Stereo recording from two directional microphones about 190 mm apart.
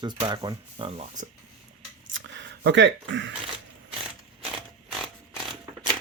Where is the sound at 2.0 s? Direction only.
75° right (ahead or behind).